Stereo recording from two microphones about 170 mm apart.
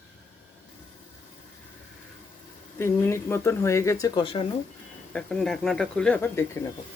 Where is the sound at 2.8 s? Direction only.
15° left (ahead or behind).